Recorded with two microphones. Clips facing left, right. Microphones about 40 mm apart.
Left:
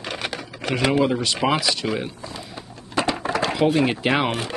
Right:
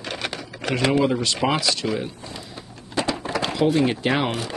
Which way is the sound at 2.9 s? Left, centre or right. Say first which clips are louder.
Left 2 dB; left.